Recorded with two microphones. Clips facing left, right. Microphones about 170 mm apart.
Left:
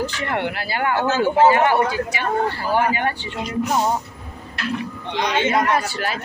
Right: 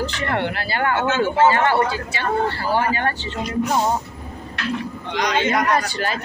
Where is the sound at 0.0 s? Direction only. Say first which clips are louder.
Right 1 dB; 10° left (ahead or behind).